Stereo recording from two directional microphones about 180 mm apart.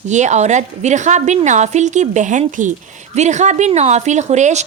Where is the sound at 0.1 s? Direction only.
40° right (ahead or behind).